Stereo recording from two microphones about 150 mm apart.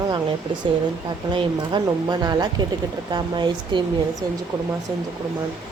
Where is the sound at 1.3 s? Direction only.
30° right (ahead or behind).